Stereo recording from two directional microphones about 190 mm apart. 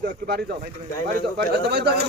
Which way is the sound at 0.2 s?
50° right (ahead or behind).